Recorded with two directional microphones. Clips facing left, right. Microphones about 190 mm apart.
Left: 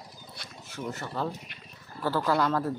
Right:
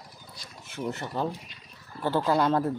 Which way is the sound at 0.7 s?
20° right (ahead or behind).